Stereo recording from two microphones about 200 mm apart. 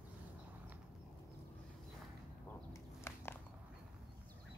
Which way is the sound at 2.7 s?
10° left (ahead or behind).